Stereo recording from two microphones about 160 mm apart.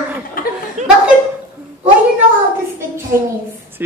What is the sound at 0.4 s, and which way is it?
Laughter, 65° left (ahead or behind).